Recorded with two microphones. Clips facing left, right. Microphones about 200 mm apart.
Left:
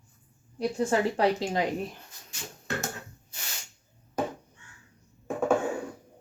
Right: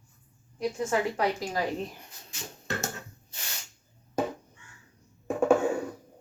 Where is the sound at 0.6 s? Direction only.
30° left (ahead or behind).